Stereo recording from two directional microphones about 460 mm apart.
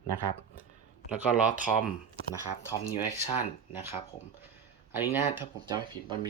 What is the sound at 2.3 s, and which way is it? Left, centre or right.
Speech, centre.